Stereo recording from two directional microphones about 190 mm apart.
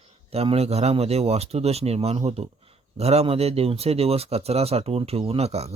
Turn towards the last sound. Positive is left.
turn(degrees=-35)  # may be behind; listen again after turning